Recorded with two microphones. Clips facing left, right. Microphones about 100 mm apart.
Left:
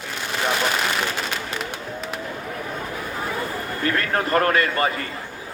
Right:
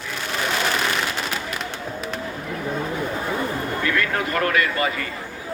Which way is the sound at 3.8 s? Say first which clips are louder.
Left 2 dB; 40° left (ahead or behind).